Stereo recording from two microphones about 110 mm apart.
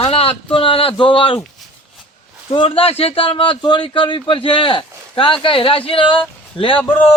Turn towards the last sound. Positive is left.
turn(degrees=50)  # may be behind; listen again after turning